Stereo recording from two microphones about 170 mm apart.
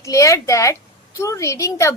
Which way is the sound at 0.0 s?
20° left (ahead or behind).